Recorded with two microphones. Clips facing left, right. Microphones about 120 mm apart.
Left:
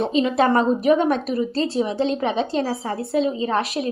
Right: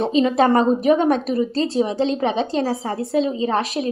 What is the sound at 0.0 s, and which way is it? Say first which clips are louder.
A woman's voice: right 2 dB; 35° right (ahead or behind).